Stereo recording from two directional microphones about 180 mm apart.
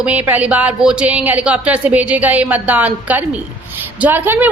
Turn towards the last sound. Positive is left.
turn(degrees=-10)  # may be behind; listen again after turning